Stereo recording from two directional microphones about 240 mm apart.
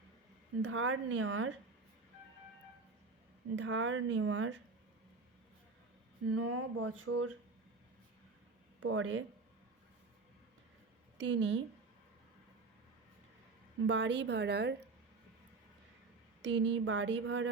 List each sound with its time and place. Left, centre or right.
0.6 s speech: right
3.5 s a woman's voice: right
6.3 s speech: right
8.8 s a woman's voice: right
11.2 s a woman's voice: right
13.8 s a woman's voice: right
16.4 s a woman's voice: right